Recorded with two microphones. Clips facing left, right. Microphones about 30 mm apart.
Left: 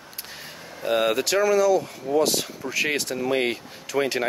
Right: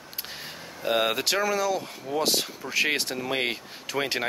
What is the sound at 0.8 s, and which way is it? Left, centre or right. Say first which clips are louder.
Speech: left 3 dB; centre.